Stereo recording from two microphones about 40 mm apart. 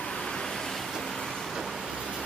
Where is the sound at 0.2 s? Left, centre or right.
Centre.